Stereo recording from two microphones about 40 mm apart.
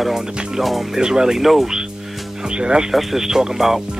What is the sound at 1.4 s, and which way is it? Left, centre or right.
Speech, centre.